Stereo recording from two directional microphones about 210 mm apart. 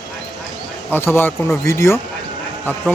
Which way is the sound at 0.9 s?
10° left (ahead or behind).